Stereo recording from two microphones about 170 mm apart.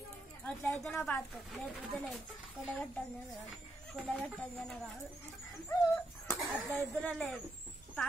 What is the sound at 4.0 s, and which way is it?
Speech, centre (ahead or behind).